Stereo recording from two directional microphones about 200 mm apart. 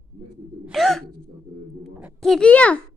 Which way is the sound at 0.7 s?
Centre (ahead or behind).